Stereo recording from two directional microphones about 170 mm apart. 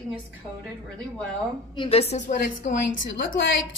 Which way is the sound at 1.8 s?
35° left (ahead or behind).